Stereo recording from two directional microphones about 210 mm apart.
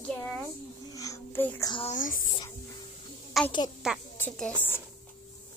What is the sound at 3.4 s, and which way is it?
A woman's voice, centre (ahead or behind).